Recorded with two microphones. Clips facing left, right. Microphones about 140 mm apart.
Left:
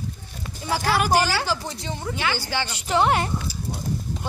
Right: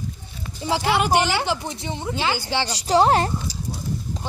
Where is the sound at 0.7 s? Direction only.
20° right (ahead or behind).